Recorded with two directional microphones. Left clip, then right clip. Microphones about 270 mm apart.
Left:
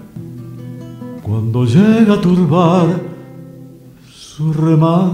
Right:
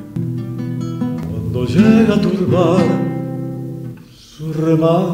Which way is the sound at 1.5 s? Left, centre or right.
Left.